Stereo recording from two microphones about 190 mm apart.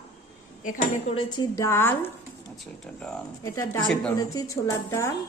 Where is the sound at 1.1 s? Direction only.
20° left (ahead or behind).